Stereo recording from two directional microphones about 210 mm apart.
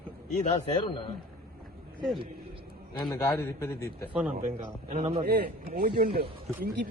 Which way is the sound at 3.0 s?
15° left (ahead or behind).